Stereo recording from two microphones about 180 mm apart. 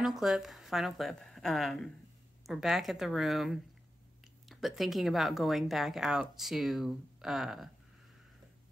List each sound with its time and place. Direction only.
0.0 s speech: centre (ahead or behind)